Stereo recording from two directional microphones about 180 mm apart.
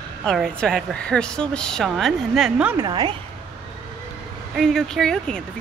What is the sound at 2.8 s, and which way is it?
Speech, 25° right (ahead or behind).